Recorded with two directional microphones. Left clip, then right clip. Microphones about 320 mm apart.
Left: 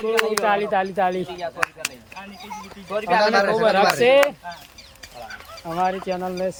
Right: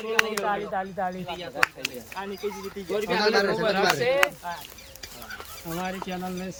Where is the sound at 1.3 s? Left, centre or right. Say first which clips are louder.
Left 1 dB; centre.